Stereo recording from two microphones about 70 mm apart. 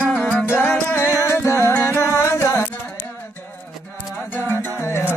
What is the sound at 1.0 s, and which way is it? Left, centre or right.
Music, left.